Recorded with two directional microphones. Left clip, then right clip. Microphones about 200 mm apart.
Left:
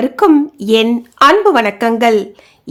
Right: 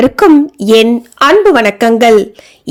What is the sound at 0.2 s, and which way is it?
A woman's voice, 25° right (ahead or behind).